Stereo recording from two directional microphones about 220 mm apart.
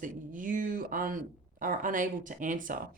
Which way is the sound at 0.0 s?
40° right (ahead or behind).